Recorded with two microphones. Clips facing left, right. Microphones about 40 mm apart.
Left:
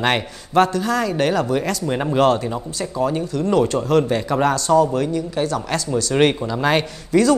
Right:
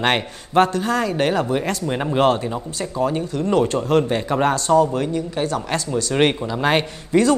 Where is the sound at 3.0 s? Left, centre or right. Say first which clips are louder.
Left 1 dB; right.